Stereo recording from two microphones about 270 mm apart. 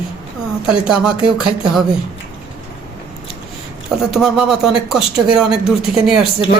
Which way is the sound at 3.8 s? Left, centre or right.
Centre.